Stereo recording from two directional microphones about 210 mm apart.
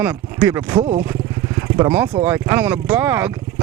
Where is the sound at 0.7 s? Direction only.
25° right (ahead or behind).